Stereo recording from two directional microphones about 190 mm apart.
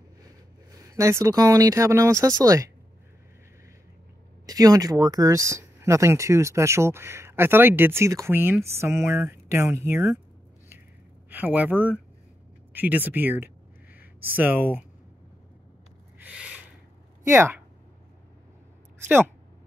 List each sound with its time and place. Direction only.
0.7 s speech: 20° right (ahead or behind)
4.5 s speech: 20° right (ahead or behind)
11.2 s speech: 10° right (ahead or behind)
16.2 s a sound: 5° right (ahead or behind)
17.3 s speech: 15° right (ahead or behind)
19.0 s speech: 10° right (ahead or behind)